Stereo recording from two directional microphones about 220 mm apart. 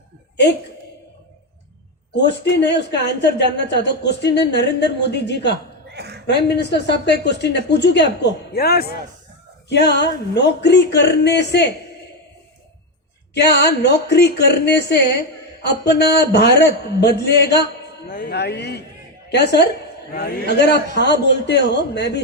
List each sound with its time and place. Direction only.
2.1 s a woman's voice: 50° left (ahead or behind)
5.9 s a sound: 50° right (ahead or behind)
6.2 s a woman's voice: 50° left (ahead or behind)
13.3 s a woman's voice: 50° left (ahead or behind)